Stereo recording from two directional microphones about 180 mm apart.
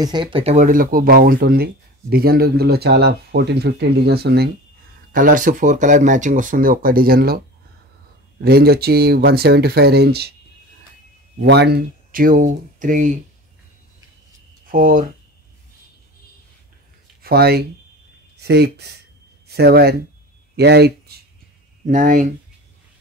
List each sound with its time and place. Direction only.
0.0 s speech: 25° right (ahead or behind); by 4.5 s 60° right (ahead or behind)
5.1 s speech: 45° right (ahead or behind)
8.4 s speech: 60° right (ahead or behind)
11.3 s speech: 65° right (ahead or behind); by 13.1 s 45° right (ahead or behind)
14.7 s speech: 50° right (ahead or behind)
17.2 s speech: 60° right (ahead or behind)
21.8 s speech: 45° right (ahead or behind)